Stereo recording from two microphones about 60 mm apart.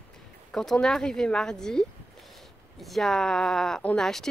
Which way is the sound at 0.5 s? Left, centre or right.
Centre.